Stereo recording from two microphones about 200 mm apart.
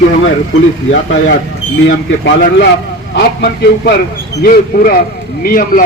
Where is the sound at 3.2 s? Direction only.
55° left (ahead or behind).